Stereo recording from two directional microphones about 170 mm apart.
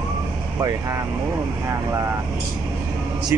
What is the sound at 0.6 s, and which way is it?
Speech, 15° right (ahead or behind).